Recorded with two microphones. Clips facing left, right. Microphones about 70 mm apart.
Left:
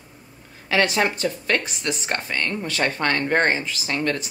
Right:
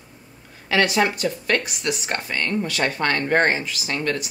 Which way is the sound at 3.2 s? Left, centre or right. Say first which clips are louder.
Right 2 dB; right.